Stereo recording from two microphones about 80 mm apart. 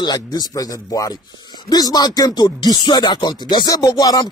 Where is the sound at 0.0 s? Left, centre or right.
Left.